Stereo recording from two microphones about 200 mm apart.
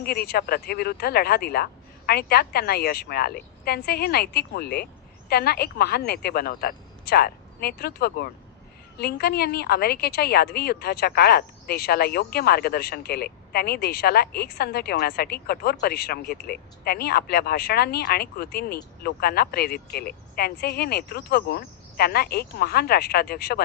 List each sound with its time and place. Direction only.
0.0 s a woman's voice: 50° left (ahead or behind)